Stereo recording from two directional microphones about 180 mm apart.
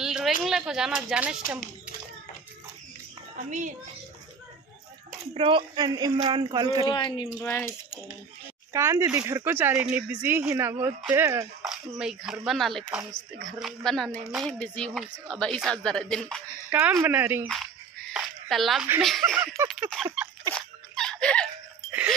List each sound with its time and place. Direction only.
0.0 s a sound: 5° right (ahead or behind)
0.4 s speech: centre (ahead or behind)
3.4 s a child's voice: 45° right (ahead or behind)
5.3 s speech: 30° right (ahead or behind)
6.9 s speech: 25° left (ahead or behind)
7.4 s speech: 10° left (ahead or behind)
8.7 s speech: 20° right (ahead or behind)
11.6 s speech: 5° right (ahead or behind)
16.7 s speech: 10° right (ahead or behind)
18.1 s a sound: centre (ahead or behind)
18.9 s speech: centre (ahead or behind)
19.3 s speech: 15° right (ahead or behind)
19.9 s speech: centre (ahead or behind)
20.5 s a sound: 5° left (ahead or behind)